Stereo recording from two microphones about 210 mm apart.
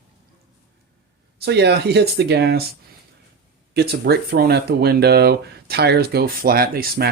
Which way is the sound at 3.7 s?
50° right (ahead or behind).